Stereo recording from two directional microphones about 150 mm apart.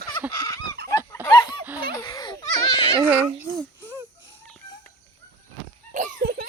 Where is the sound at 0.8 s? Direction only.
90° right.